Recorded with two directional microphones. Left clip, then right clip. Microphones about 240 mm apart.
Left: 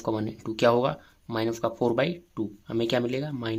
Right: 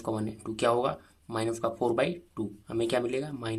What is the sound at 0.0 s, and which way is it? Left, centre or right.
Speech, centre.